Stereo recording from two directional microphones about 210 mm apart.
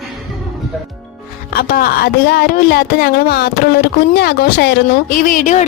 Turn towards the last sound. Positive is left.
turn(degrees=40)  # may be behind; listen again after turning